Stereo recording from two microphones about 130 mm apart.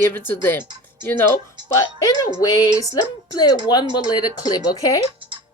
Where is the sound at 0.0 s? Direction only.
15° left (ahead or behind).